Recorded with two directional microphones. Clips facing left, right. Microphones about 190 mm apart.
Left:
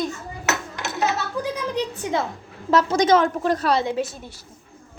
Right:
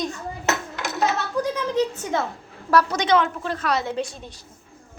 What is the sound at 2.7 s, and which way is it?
Speech, 30° left (ahead or behind).